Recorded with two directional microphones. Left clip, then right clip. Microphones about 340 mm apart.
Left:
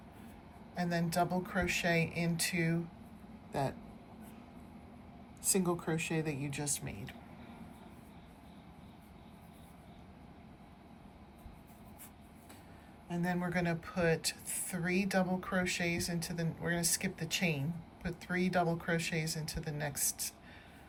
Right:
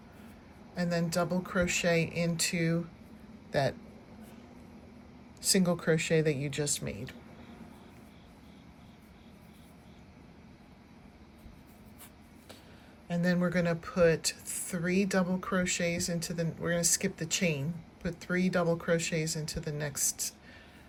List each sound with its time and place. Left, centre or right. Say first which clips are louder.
0.8 s speech: right 2 dB; centre
6.0 s speech: right 9 dB; centre
13.1 s speech: right 6 dB; centre